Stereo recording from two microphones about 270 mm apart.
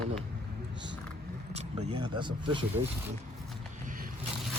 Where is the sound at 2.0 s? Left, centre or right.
Centre.